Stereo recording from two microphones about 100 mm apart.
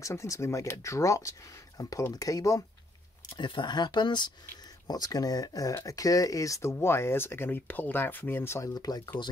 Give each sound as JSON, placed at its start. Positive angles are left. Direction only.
{"t": 0.0, "sound": "speech", "side_deg": 30}
{"t": 3.3, "sound": "speech", "side_deg": 50}
{"t": 8.7, "sound": "speech", "side_deg": 40}